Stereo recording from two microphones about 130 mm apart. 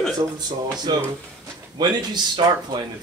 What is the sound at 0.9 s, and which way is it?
Speech, 30° right (ahead or behind).